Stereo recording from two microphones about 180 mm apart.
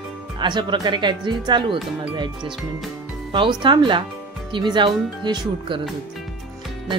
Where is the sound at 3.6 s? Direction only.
25° right (ahead or behind).